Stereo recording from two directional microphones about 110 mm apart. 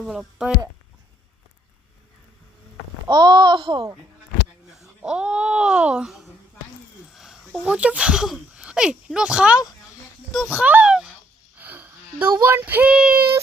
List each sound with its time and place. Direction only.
0.0 s speech: 5° right (ahead or behind)
3.1 s a child's voice: 45° right (ahead or behind)
4.7 s speech: 5° right (ahead or behind)
7.1 s a sound: 5° right (ahead or behind)
7.6 s speech: 10° right (ahead or behind)
10.5 s a sound: 10° right (ahead or behind)
11.5 s sniff: 15° right (ahead or behind)
12.3 s speech: 20° right (ahead or behind)